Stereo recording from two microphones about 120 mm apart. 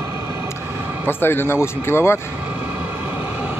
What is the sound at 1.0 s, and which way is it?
Speech, 20° left (ahead or behind).